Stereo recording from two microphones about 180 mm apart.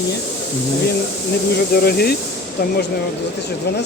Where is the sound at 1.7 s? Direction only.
60° left (ahead or behind).